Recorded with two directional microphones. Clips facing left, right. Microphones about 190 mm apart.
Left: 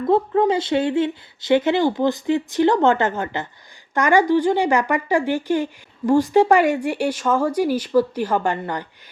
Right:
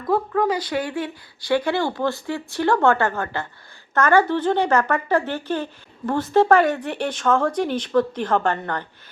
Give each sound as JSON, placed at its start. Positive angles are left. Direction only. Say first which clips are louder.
{"t": 0.0, "sound": "speech", "louder": "left 4 dB", "side_deg": 25}